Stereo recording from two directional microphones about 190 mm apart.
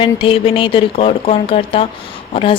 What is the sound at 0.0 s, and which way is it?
A woman's voice, 25° left (ahead or behind).